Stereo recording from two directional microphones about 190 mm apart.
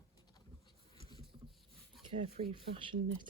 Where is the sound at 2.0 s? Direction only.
30° right (ahead or behind).